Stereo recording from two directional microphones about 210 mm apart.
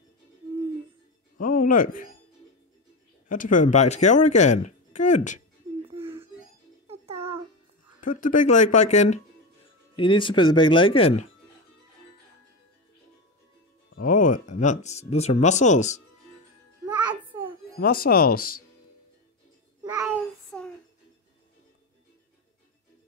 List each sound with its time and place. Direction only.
1.4 s speech: 40° left (ahead or behind)
3.3 s a woman's voice: 40° left (ahead or behind)
6.9 s music: 30° right (ahead or behind)
8.2 s a woman's voice: 40° left (ahead or behind)
9.9 s speech: 25° left (ahead or behind)
13.9 s a woman's voice: 40° left (ahead or behind)
16.8 s music: 20° right (ahead or behind)
17.7 s speech: 45° left (ahead or behind)
19.8 s child singing: 15° right (ahead or behind)
20.5 s a sound: 5° left (ahead or behind)